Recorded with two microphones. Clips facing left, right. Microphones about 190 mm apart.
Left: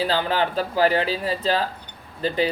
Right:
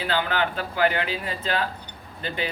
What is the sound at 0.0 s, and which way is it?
Speech, 35° left (ahead or behind).